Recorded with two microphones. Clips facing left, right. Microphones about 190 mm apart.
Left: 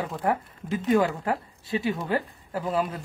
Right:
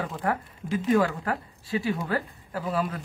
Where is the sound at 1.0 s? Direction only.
25° left (ahead or behind).